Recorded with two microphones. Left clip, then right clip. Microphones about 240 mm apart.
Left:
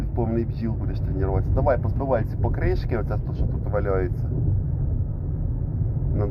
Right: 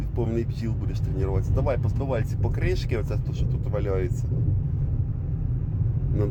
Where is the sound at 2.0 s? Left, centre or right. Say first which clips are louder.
Left 5 dB; right.